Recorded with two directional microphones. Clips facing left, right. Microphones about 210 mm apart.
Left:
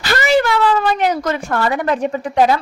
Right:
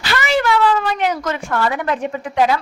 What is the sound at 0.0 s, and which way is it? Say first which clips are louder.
Speech: left 3 dB; 40° left (ahead or behind).